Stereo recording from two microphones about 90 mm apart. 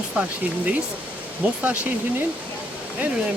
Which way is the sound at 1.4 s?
15° right (ahead or behind).